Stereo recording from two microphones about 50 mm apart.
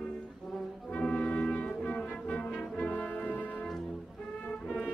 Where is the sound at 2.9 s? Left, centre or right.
Left.